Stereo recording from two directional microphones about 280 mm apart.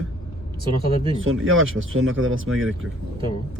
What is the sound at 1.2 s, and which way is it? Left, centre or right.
Speech, right.